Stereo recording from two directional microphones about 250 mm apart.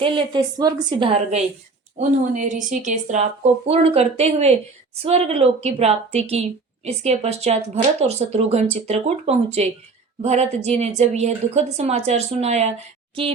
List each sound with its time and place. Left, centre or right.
0.0 s speech: centre